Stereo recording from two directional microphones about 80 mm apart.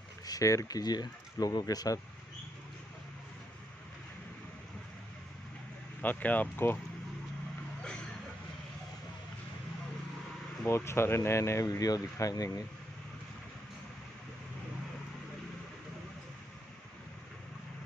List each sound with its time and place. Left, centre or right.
0.3 s speech: left
5.9 s speech: left
10.7 s speech: left